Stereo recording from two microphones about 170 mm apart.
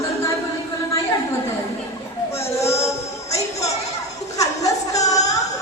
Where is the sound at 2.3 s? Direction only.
15° left (ahead or behind).